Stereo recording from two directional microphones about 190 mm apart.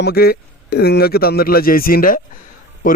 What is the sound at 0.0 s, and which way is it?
A man's voice, 55° left (ahead or behind).